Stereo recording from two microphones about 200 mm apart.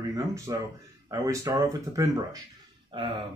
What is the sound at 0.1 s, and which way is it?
Speech, 15° right (ahead or behind).